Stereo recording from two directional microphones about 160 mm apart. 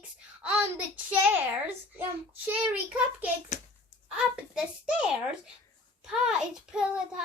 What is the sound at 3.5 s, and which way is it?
Speech, 50° left (ahead or behind).